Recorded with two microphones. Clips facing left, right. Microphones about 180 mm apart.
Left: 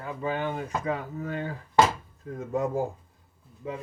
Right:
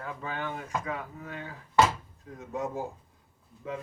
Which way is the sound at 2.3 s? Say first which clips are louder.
Left 6 dB; 50° left (ahead or behind).